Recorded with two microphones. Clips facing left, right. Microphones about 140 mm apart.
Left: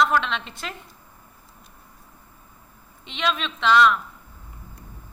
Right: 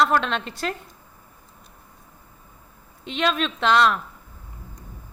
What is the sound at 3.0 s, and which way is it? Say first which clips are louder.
Speech: right 3 dB; 45° right (ahead or behind).